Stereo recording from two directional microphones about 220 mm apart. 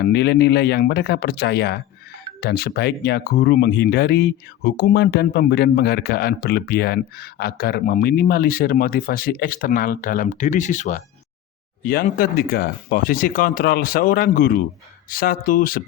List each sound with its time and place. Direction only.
0.0 s speech: 50° left (ahead or behind)